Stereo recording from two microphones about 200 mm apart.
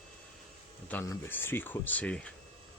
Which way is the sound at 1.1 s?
10° left (ahead or behind).